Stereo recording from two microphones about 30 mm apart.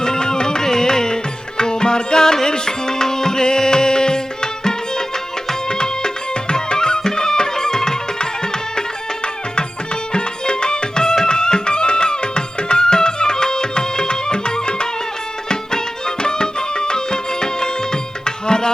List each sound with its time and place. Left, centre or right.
0.0 s music: left